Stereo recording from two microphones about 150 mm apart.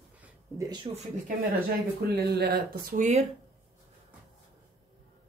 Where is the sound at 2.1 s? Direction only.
90° right; by 3.2 s 60° right (ahead or behind).